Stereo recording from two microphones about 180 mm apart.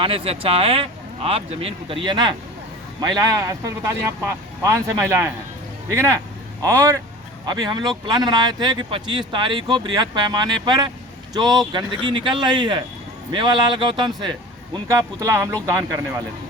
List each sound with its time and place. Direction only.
0.0 s speech: 30° right (ahead or behind); by 15.7 s 15° right (ahead or behind)